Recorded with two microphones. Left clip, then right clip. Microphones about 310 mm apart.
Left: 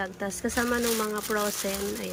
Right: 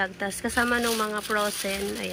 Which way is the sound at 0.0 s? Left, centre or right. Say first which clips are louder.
Right 3 dB; centre.